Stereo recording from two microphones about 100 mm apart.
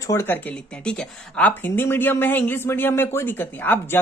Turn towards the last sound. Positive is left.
turn(degrees=20)  # may be behind; listen again after turning